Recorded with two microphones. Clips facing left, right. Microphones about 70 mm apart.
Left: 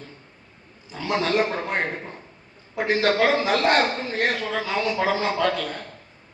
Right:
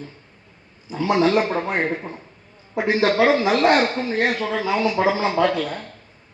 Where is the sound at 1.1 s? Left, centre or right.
Centre.